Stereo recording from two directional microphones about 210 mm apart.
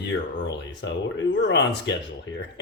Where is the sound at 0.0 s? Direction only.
60° left (ahead or behind).